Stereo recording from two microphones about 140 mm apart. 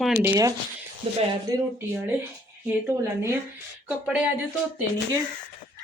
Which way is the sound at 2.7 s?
15° right (ahead or behind).